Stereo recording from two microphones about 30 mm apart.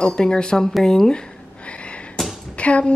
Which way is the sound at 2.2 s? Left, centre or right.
Centre.